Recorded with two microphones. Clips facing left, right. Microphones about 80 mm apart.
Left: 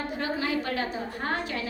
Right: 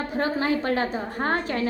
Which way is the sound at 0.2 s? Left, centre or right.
Right.